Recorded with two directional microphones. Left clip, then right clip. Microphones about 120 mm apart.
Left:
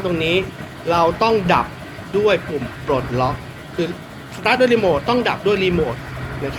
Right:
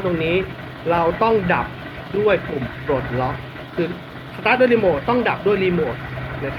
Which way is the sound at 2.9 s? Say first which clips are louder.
Left 3 dB; 15° left (ahead or behind).